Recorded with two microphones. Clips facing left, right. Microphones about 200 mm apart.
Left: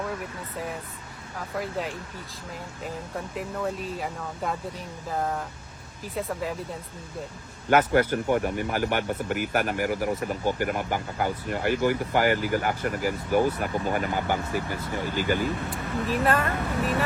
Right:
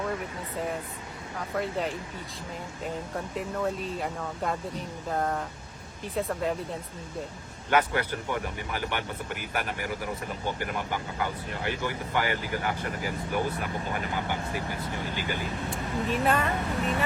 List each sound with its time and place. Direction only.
1.4 s speech: centre (ahead or behind)
7.7 s speech: 45° left (ahead or behind)
15.7 s speech: centre (ahead or behind)